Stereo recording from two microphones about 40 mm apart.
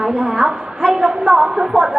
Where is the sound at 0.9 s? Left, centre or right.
Centre.